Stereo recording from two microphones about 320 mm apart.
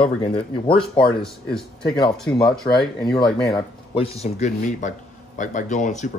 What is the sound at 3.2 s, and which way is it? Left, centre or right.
Speech, centre.